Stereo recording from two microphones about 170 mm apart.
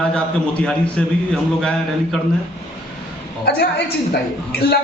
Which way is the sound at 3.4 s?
70° left (ahead or behind).